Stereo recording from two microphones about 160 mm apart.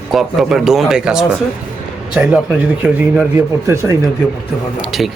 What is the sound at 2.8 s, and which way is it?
Speech, 10° right (ahead or behind).